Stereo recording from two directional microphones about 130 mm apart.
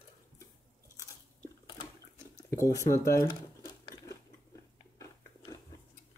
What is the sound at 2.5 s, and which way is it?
Speech, 25° left (ahead or behind).